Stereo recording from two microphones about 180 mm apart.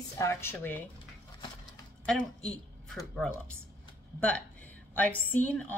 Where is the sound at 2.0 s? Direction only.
5° left (ahead or behind).